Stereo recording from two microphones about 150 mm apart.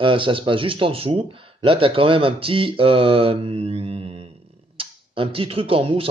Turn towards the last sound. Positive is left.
turn(degrees=-40)  # may be behind; listen again after turning